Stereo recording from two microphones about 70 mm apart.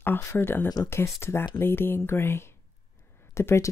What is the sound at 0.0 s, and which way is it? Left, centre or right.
Speech, left.